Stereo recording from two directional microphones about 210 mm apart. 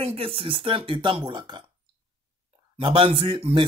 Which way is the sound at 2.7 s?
25° right (ahead or behind).